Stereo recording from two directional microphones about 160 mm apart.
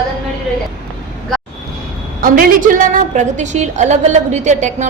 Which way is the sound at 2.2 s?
65° right (ahead or behind).